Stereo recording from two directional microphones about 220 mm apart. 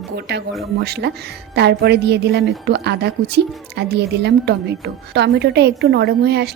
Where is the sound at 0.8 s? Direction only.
45° right (ahead or behind).